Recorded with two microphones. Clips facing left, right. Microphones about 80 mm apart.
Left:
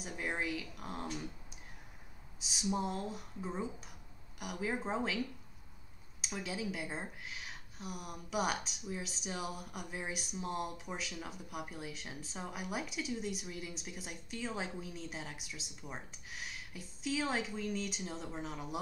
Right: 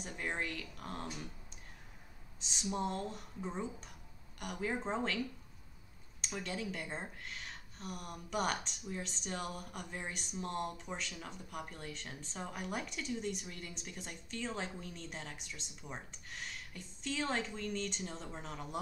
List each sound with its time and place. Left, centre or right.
0.0 s speech: centre
2.4 s speech: centre
6.2 s speech: centre